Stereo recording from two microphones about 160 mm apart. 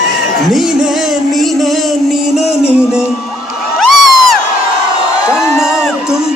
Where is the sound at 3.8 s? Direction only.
Centre (ahead or behind).